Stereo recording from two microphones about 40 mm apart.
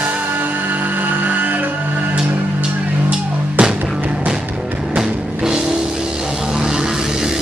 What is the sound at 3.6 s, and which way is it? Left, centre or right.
Music, right.